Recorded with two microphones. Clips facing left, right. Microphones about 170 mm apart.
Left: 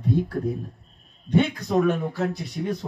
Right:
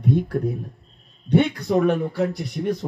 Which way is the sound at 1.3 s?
65° right (ahead or behind).